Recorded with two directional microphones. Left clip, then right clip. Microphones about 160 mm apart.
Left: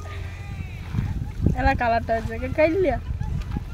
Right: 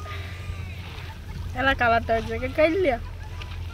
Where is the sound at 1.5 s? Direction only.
Centre (ahead or behind).